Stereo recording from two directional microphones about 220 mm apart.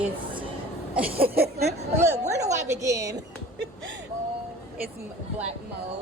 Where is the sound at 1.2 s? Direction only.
45° right (ahead or behind).